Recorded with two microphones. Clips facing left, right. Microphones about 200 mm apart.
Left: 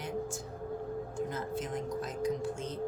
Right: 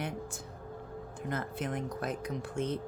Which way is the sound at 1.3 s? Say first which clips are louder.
Even; 60° right (ahead or behind).